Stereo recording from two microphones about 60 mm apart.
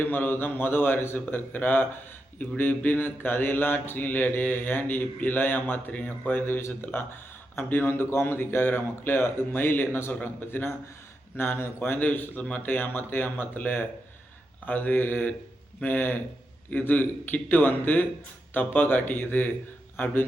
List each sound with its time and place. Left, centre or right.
0.0 s mantra: left